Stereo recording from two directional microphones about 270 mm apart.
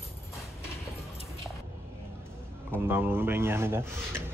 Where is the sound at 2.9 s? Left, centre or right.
Centre.